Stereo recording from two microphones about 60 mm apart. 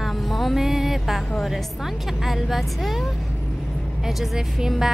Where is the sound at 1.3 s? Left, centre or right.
Centre.